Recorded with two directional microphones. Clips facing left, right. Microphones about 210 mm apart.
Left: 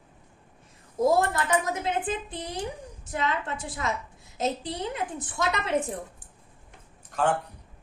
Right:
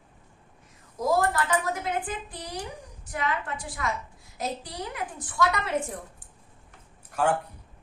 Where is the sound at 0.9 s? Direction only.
25° left (ahead or behind).